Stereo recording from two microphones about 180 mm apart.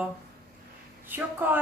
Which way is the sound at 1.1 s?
10° right (ahead or behind).